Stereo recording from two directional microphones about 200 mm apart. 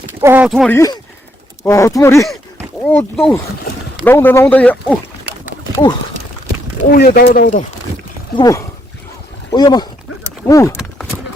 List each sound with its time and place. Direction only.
0.2 s speech: 10° right (ahead or behind)
0.7 s speech: 15° left (ahead or behind)
6.9 s speech: 50° left (ahead or behind)
8.4 s speech: 15° left (ahead or behind)